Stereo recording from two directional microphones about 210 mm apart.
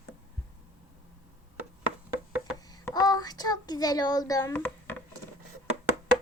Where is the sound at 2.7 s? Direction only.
15° left (ahead or behind).